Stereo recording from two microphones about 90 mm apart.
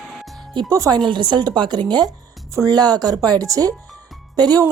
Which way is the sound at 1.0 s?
60° right (ahead or behind).